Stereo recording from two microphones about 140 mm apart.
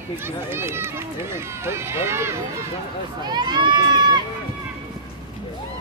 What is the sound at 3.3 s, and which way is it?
Speech, 30° right (ahead or behind).